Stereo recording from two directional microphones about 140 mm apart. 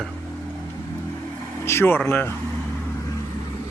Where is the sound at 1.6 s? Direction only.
15° left (ahead or behind).